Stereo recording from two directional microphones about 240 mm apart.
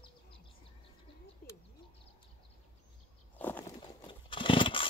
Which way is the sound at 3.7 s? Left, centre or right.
Left.